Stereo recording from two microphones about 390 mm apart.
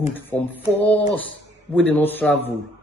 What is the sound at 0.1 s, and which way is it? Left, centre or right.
A man's voice, centre.